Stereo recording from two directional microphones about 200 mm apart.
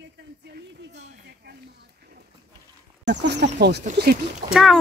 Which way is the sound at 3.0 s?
60° right (ahead or behind).